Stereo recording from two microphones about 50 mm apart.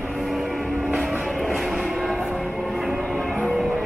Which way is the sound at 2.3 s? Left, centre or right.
Centre.